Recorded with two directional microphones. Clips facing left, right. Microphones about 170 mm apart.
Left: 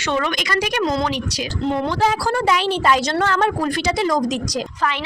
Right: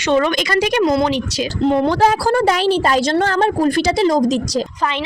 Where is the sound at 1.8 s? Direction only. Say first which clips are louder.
Right 5 dB; 40° right (ahead or behind).